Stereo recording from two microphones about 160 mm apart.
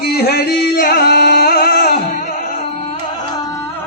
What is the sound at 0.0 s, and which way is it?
Music, 75° left (ahead or behind).